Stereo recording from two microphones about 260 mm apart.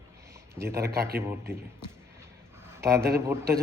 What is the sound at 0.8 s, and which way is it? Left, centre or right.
Speech, right.